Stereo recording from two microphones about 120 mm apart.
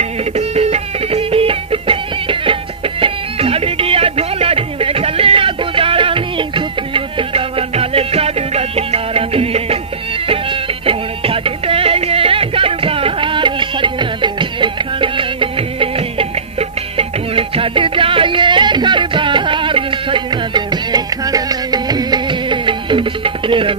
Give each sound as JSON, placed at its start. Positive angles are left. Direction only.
{"t": 0.2, "sound": "music", "side_deg": -60}